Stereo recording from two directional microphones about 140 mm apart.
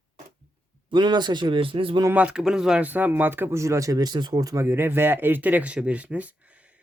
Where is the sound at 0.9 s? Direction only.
30° right (ahead or behind).